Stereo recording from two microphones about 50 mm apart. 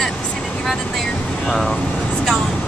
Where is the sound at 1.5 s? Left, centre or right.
Centre.